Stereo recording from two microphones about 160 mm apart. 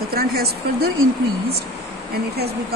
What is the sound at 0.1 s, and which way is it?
Speech, 75° right (ahead or behind).